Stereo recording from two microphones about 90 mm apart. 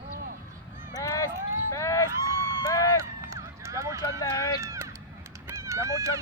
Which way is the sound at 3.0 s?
35° right (ahead or behind).